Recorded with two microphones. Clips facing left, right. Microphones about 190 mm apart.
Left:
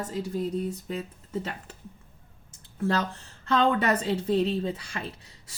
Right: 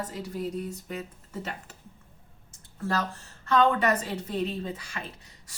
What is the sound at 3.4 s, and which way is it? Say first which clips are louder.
Speech: even; 30° left (ahead or behind).